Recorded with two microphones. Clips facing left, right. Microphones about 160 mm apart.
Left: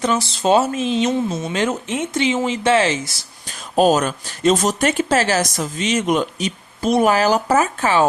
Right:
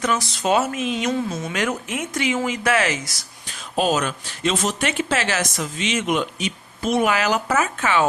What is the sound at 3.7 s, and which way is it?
Speech, 40° left (ahead or behind).